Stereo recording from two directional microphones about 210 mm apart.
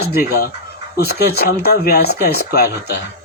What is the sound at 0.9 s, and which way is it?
Speech, 50° left (ahead or behind).